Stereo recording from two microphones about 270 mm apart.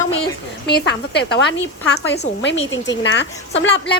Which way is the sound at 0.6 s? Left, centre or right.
Left.